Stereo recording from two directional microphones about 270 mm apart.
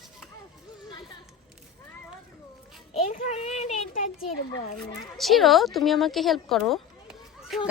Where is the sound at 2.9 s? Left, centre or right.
Left.